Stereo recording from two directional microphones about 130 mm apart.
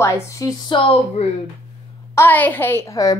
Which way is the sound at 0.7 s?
45° left (ahead or behind).